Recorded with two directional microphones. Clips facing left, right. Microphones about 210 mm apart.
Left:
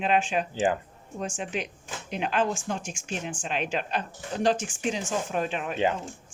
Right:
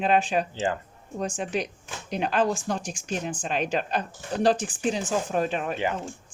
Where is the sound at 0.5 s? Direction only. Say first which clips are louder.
Left 2 dB; 15° left (ahead or behind).